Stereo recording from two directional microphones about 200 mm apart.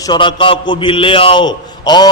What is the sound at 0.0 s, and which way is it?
A man's voice, 25° left (ahead or behind).